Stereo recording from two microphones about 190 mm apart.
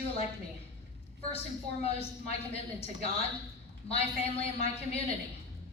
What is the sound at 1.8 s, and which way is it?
A woman's voice, 30° left (ahead or behind).